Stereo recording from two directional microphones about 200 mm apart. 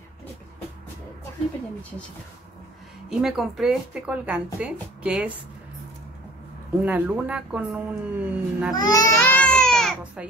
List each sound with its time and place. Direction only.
3.1 s speech: centre (ahead or behind)
6.8 s speech: 10° right (ahead or behind)
8.7 s speech: 20° left (ahead or behind)
9.2 s baby cry: 5° left (ahead or behind)